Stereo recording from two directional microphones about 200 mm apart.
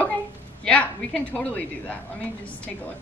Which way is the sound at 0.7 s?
5° left (ahead or behind).